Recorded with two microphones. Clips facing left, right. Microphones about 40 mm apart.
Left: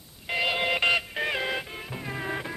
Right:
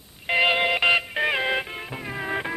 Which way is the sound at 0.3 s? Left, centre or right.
Right.